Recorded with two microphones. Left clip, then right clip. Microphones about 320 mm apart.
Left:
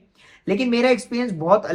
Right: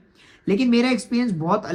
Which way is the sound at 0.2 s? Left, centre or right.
Centre.